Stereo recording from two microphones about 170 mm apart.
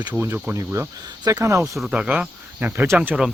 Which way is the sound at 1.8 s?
5° right (ahead or behind).